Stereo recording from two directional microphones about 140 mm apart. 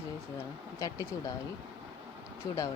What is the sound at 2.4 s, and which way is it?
Speech, 20° left (ahead or behind).